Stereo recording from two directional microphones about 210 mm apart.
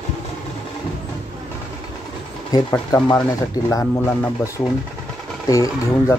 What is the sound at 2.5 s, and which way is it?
Speech, 20° left (ahead or behind).